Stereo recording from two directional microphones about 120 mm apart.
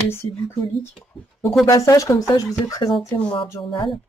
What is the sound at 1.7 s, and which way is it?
Speech, 30° left (ahead or behind).